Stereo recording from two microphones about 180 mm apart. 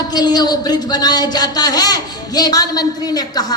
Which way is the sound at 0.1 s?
20° left (ahead or behind).